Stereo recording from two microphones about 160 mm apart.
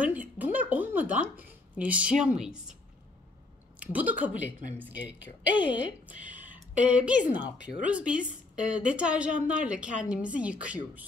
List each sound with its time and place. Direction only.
0.0 s a sound: 10° right (ahead or behind)
3.8 s a woman's voice: 10° right (ahead or behind)
5.5 s a woman's voice: 30° left (ahead or behind)
5.8 s a woman's voice: 10° right (ahead or behind)